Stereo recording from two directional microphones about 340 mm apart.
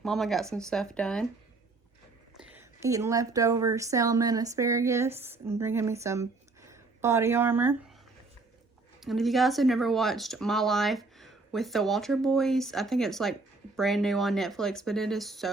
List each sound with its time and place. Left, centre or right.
0.0 s speech: centre
2.4 s a woman's voice: centre
9.0 s speech: centre